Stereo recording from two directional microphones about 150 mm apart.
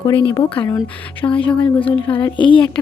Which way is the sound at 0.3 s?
35° left (ahead or behind).